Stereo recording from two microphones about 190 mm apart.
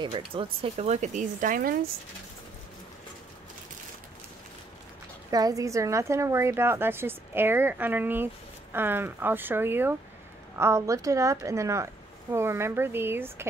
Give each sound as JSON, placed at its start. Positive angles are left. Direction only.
{"t": 0.3, "sound": "speech", "side_deg": -30}
{"t": 5.3, "sound": "a woman's voice", "side_deg": -20}